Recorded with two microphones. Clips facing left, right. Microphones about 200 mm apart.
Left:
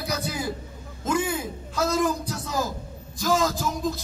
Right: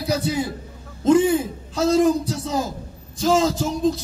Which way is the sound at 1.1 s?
30° right (ahead or behind).